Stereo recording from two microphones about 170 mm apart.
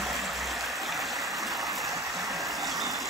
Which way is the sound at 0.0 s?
Centre (ahead or behind).